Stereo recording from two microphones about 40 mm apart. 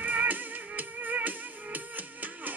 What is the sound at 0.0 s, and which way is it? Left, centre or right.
Music, right.